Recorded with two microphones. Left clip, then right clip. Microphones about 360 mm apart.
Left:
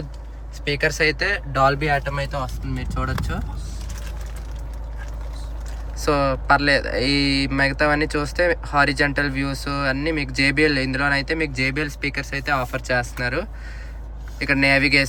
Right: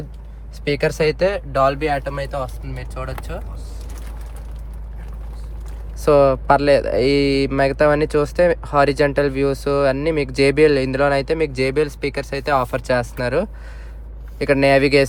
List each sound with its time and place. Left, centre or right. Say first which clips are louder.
1.3 s speech: right 1 dB; centre
6.0 s speech: right 7 dB; centre